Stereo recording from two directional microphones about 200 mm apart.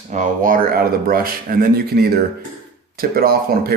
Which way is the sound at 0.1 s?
40° right (ahead or behind).